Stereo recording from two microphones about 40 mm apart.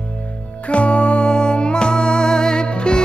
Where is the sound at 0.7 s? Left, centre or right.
Left.